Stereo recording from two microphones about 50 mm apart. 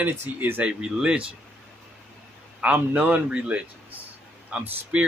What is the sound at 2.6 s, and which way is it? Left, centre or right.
Speech, right.